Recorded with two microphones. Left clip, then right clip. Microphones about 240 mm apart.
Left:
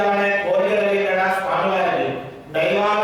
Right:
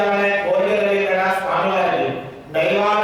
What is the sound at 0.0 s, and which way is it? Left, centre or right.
Chant, centre.